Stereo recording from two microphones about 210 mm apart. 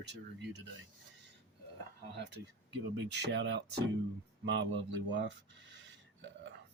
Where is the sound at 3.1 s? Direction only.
55° right (ahead or behind).